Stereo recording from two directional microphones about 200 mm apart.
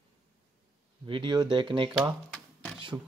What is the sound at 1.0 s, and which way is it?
Speech, 25° right (ahead or behind).